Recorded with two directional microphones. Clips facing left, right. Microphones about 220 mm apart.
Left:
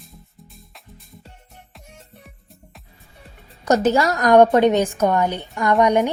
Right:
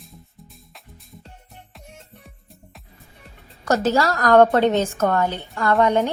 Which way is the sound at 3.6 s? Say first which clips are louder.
Left 2 dB; 20° left (ahead or behind).